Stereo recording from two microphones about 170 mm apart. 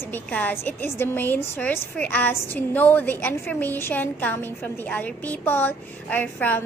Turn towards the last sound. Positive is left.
turn(degrees=10)  # may be behind; listen again after turning